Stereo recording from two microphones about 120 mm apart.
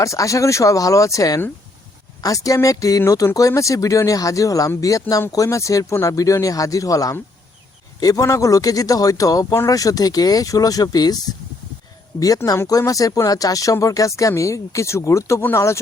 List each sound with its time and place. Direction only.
0.0 s speech: 25° left (ahead or behind)
12.6 s speech: 30° left (ahead or behind)